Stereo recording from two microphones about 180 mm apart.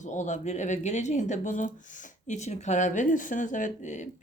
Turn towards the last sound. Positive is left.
turn(degrees=40)  # may be behind; listen again after turning